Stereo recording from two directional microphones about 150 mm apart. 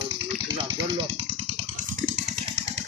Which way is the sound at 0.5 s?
30° right (ahead or behind).